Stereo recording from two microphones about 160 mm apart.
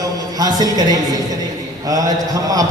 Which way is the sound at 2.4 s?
20° right (ahead or behind).